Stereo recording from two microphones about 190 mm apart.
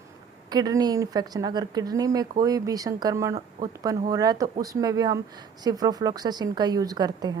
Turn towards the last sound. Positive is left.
turn(degrees=-20)  # may be behind; listen again after turning